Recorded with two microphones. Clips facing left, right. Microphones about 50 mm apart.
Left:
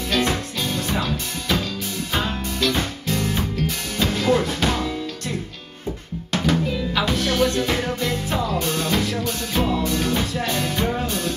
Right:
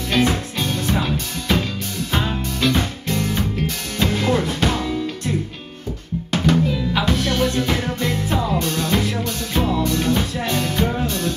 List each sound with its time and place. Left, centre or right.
0.1 s music: centre
2.1 s music: centre
6.5 s music: centre
8.5 s music: centre
8.9 s music: centre
9.2 s music: centre